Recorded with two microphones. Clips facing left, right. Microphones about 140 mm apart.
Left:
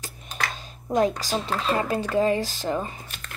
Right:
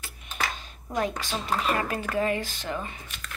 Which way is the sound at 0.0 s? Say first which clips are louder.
Left 1 dB; 35° left (ahead or behind).